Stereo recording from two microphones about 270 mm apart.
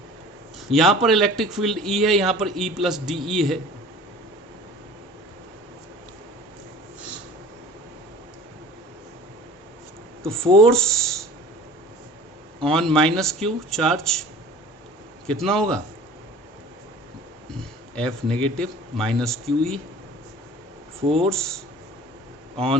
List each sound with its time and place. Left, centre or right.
0.7 s speech: centre
10.6 s speech: centre
12.6 s speech: centre
15.3 s speech: centre
17.9 s speech: centre
21.0 s speech: right
21.2 s speech: centre